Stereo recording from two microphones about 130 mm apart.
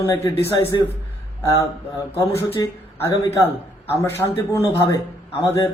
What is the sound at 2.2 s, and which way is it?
Speech, 25° left (ahead or behind).